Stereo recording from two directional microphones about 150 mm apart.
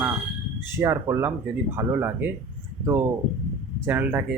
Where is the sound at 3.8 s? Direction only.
15° right (ahead or behind).